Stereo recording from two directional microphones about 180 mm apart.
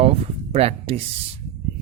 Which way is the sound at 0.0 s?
35° right (ahead or behind).